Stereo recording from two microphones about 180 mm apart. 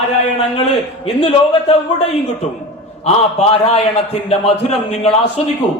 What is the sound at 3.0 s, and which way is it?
Speech, 35° left (ahead or behind).